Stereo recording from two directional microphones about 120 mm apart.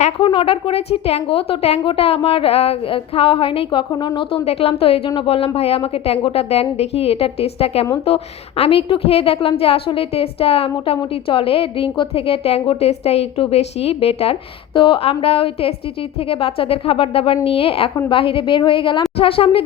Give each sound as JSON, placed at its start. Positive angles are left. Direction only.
{"t": 0.2, "sound": "a woman's voice", "side_deg": 45}